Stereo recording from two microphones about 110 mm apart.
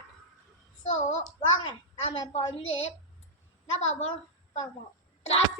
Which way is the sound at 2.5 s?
70° left (ahead or behind).